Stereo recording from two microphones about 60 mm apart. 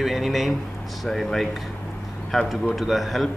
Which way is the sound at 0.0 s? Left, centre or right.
Centre.